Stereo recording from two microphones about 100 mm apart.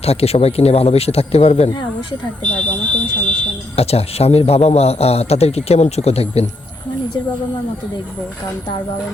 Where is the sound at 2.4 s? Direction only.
10° left (ahead or behind).